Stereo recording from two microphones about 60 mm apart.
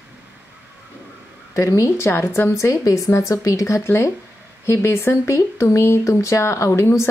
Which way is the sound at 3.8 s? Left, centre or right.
Left.